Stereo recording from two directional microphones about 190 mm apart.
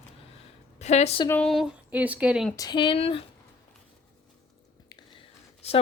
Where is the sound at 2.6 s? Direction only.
25° left (ahead or behind).